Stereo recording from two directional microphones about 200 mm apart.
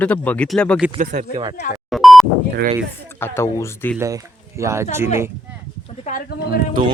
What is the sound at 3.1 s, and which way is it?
Speech, 10° left (ahead or behind).